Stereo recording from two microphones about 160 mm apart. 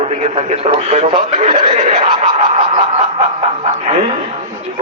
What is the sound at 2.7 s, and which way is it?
Snicker, 45° right (ahead or behind).